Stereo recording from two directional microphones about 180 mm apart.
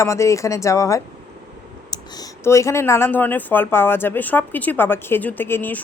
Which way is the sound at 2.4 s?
15° left (ahead or behind).